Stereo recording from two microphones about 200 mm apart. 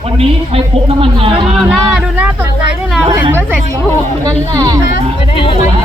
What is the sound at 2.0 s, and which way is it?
Speech, 5° right (ahead or behind).